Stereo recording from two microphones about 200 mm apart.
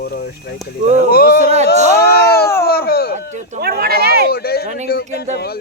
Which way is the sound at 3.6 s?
50° right (ahead or behind).